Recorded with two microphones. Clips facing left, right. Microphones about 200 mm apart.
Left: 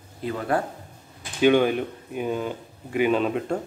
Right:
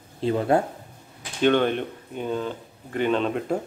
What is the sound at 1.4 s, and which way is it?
Speech, 5° left (ahead or behind).